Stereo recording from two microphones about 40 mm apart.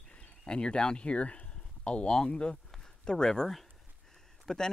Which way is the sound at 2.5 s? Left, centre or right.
Centre.